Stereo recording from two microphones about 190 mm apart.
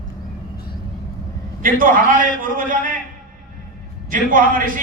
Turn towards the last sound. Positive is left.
turn(degrees=-45)  # may be behind; listen again after turning